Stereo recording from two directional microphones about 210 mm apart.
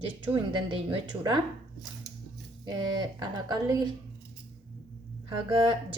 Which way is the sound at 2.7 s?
20° right (ahead or behind).